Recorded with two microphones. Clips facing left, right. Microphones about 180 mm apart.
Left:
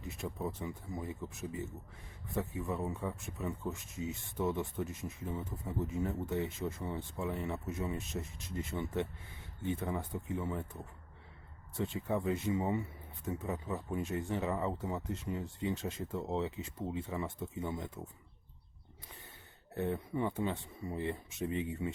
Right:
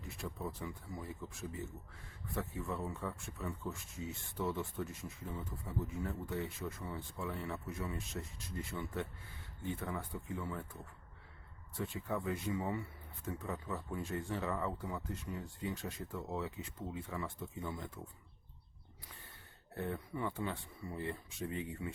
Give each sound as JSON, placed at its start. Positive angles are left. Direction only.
{"t": 0.0, "sound": "speech", "side_deg": 20}
{"t": 11.8, "sound": "speech", "side_deg": 20}
{"t": 19.7, "sound": "speech", "side_deg": 20}